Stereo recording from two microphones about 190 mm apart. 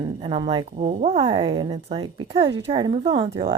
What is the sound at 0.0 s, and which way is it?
A woman's voice, 25° right (ahead or behind).